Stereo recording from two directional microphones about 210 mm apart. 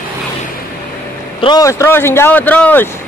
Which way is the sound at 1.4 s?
20° left (ahead or behind).